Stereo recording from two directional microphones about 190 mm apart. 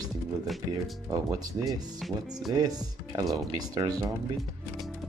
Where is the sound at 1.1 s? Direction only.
20° right (ahead or behind).